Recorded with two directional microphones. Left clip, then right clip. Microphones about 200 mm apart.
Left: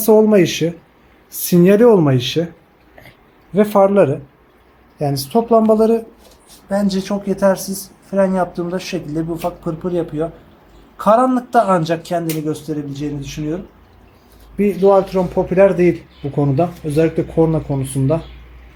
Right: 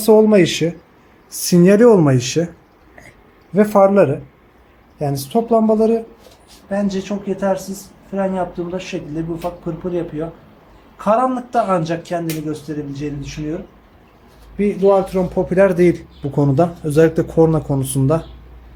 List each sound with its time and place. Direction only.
0.0 s a man's voice: centre (ahead or behind)
3.5 s a man's voice: centre (ahead or behind)
4.9 s speech: 15° left (ahead or behind)
6.7 s speech: 40° left (ahead or behind)
14.6 s speech: 25° left (ahead or behind)
14.9 s a man's voice: 10° left (ahead or behind)
16.4 s speech: 10° right (ahead or behind)